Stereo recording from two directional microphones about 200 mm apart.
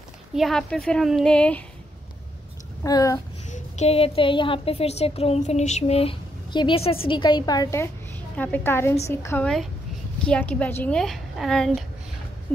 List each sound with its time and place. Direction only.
0.3 s a woman's voice: centre (ahead or behind)
2.8 s a woman's voice: 15° left (ahead or behind)
3.4 s a woman's voice: 35° left (ahead or behind); by 11.8 s centre (ahead or behind)